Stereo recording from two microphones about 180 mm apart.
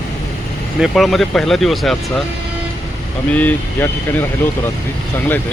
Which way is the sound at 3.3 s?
10° left (ahead or behind).